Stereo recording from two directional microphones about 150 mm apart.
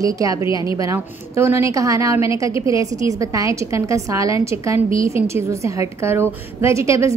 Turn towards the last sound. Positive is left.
turn(degrees=-20)  # may be behind; listen again after turning